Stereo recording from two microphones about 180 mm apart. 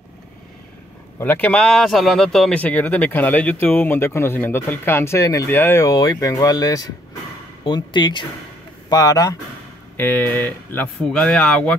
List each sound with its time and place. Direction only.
1.2 s speech: 10° left (ahead or behind)